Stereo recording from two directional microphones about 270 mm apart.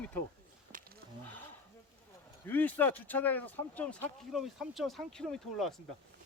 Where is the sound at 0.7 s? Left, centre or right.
Right.